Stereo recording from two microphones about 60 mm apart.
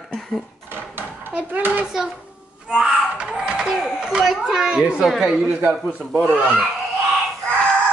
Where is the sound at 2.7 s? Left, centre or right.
Centre.